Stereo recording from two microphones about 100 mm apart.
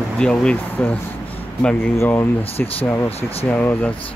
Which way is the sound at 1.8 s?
25° left (ahead or behind).